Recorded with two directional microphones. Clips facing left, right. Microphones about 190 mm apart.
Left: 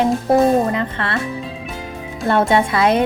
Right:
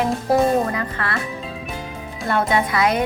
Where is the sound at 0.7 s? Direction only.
25° left (ahead or behind).